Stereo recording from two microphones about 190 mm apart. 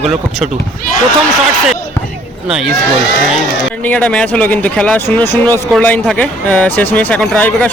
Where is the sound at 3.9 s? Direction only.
5° left (ahead or behind).